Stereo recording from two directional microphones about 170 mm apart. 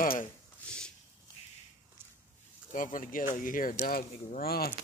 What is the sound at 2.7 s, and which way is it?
Speech, 50° left (ahead or behind).